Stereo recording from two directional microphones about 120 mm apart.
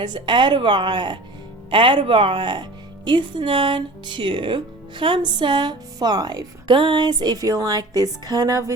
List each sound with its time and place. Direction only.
0.0 s a woman's voice: 40° right (ahead or behind)